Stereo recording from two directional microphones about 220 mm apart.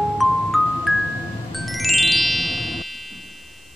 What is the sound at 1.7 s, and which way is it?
Music, centre (ahead or behind).